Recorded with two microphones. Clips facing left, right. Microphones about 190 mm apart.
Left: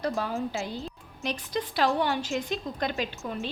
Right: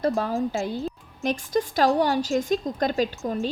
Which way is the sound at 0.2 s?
40° right (ahead or behind).